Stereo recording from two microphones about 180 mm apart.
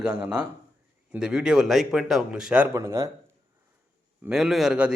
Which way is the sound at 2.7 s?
15° right (ahead or behind).